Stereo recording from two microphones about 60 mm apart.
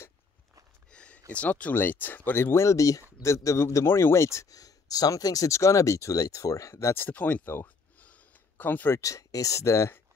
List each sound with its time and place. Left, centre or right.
0.9 s a sound: centre
1.3 s speech: left
2.5 s speech: left
4.5 s speech: left
7.0 s speech: left
7.6 s a sound: left
9.0 s speech: left